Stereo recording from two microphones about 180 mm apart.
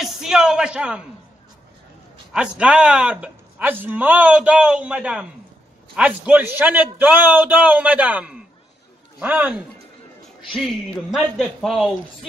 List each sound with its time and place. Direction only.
0.0 s a man's voice: 5° right (ahead or behind)
2.3 s a man's voice: 5° right (ahead or behind)
11.1 s speech: centre (ahead or behind)